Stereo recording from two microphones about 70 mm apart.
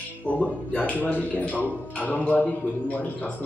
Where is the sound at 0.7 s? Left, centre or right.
Centre.